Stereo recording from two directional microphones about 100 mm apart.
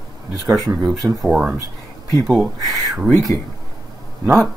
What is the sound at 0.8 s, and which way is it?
Speech, 5° right (ahead or behind).